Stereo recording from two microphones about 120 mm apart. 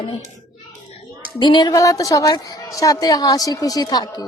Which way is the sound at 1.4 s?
40° left (ahead or behind).